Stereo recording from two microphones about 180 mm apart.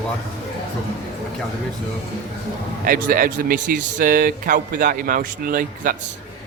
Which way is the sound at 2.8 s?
50° right (ahead or behind).